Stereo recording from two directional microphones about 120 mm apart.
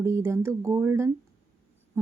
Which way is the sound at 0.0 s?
25° right (ahead or behind).